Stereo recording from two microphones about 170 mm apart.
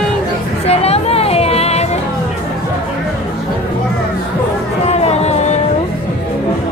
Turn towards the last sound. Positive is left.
turn(degrees=40)  # may be behind; listen again after turning